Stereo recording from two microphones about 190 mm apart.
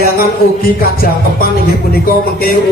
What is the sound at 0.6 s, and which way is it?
Speech, 50° left (ahead or behind).